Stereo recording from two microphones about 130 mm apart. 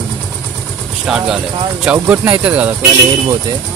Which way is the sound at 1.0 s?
5° right (ahead or behind).